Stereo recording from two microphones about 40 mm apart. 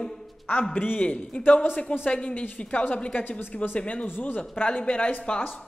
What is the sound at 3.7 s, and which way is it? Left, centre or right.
A woman's voice, left.